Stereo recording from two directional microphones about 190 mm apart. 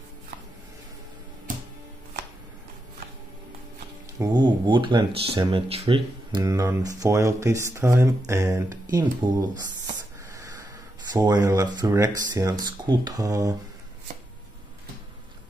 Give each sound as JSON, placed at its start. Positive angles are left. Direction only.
{"t": 4.2, "sound": "speech", "side_deg": -20}
{"t": 11.1, "sound": "speech", "side_deg": -20}